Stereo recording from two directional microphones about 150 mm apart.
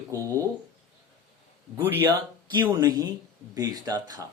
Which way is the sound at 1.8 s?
15° right (ahead or behind).